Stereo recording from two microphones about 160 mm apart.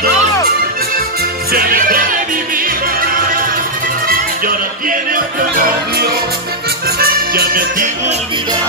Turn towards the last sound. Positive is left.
turn(degrees=-65)  # may be behind; listen again after turning